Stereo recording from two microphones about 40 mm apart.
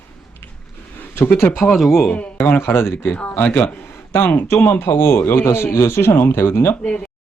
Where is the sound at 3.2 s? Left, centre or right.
Left.